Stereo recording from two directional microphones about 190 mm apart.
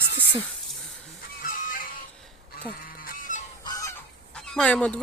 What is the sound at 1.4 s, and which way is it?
Music, 45° left (ahead or behind).